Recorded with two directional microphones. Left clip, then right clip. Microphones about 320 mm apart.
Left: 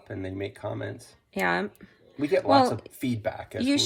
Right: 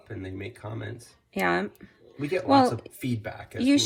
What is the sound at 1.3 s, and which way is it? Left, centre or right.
Speech, centre.